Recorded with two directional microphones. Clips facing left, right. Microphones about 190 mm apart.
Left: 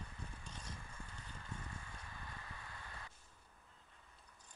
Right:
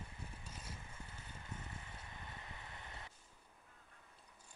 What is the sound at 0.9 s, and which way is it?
Horse, 20° right (ahead or behind).